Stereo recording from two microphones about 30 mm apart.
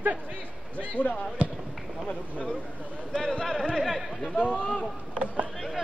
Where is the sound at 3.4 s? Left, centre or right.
Centre.